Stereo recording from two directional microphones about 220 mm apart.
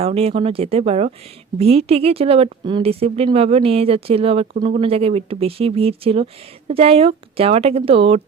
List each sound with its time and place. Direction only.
0.0 s speech: 25° right (ahead or behind)